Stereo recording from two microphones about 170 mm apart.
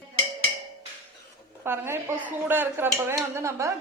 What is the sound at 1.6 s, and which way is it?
A woman's voice, 15° right (ahead or behind).